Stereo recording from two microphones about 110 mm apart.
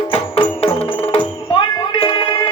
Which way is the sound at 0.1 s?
65° left (ahead or behind).